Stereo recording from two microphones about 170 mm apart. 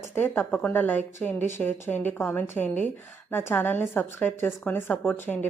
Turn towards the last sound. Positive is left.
turn(degrees=10)  # may be behind; listen again after turning